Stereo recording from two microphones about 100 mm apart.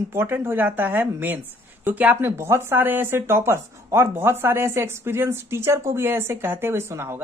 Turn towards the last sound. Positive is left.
turn(degrees=-25)  # may be behind; listen again after turning